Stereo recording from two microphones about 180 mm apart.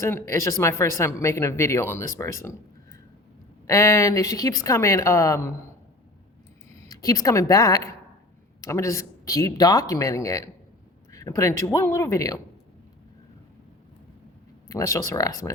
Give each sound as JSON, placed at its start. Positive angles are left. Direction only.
{"t": 0.0, "sound": "speech", "side_deg": 15}
{"t": 3.7, "sound": "speech", "side_deg": 15}
{"t": 6.8, "sound": "speech", "side_deg": 20}
{"t": 14.7, "sound": "speech", "side_deg": 20}